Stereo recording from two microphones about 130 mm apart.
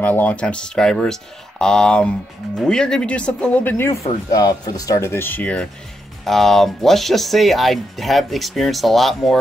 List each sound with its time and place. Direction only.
0.0 s speech: 15° left (ahead or behind)
4.3 s speech: 30° left (ahead or behind); by 9.4 s centre (ahead or behind)